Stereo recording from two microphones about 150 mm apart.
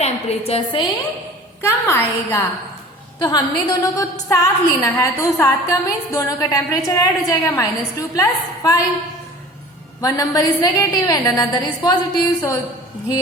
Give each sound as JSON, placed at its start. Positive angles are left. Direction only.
{"t": 0.0, "sound": "a woman's voice", "side_deg": 45}
{"t": 1.6, "sound": "a woman's voice", "side_deg": 15}
{"t": 10.0, "sound": "a woman's voice", "side_deg": 25}